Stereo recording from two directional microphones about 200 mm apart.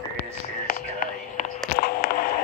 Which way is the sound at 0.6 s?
40° left (ahead or behind).